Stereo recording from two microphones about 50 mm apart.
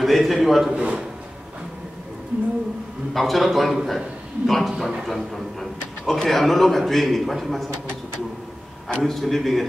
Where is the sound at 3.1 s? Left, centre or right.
Centre.